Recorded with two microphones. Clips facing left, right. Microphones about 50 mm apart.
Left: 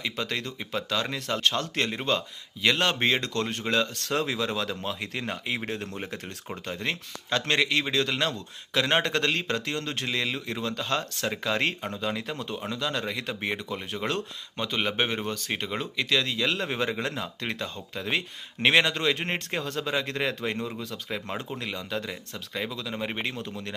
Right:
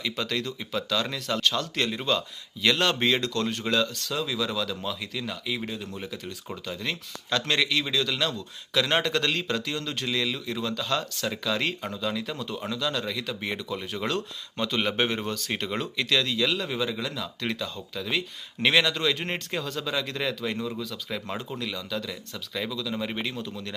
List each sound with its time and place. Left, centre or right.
0.0 s a man's voice: left
5.7 s speech: left
6.0 s a man's voice: left
14.6 s a man's voice: centre
21.6 s a man's voice: left